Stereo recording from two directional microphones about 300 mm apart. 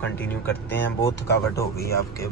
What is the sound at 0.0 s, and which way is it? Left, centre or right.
Speech, centre.